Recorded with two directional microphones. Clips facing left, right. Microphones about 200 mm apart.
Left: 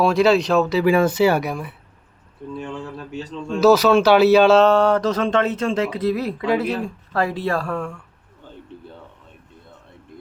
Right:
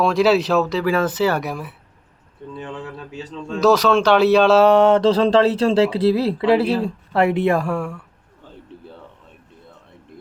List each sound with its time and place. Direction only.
0.0 s a man's voice: centre (ahead or behind)
0.9 s speech: 15° left (ahead or behind)
1.4 s a man's voice: centre (ahead or behind)
2.8 s a man's voice: centre (ahead or behind)
4.6 s speech: 20° right (ahead or behind)